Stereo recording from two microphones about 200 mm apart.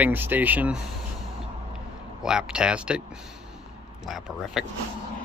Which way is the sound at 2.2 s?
5° right (ahead or behind).